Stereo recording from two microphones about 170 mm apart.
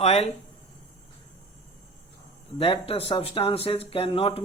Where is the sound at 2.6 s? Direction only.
35° left (ahead or behind).